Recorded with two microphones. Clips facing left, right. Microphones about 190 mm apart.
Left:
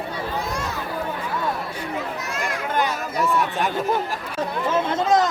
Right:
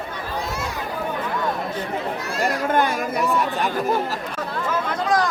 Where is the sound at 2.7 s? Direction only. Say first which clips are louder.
Right 2 dB; 55° right (ahead or behind).